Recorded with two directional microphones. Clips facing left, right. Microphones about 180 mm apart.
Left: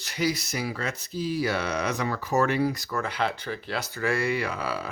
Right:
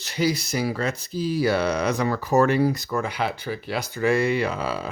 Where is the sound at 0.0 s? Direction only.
30° right (ahead or behind).